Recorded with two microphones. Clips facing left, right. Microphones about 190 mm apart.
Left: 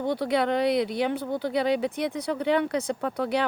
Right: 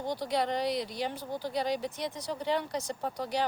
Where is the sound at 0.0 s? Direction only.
60° left (ahead or behind).